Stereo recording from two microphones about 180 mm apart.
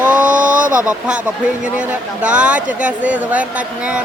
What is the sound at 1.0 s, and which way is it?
Speech, 5° right (ahead or behind).